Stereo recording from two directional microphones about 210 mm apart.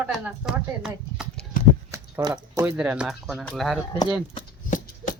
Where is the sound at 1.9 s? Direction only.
15° right (ahead or behind).